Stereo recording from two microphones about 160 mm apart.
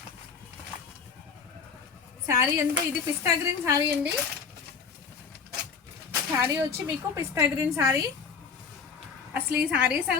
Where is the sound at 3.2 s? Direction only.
20° right (ahead or behind).